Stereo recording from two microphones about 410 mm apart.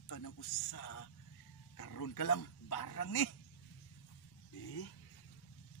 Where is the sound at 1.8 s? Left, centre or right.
Left.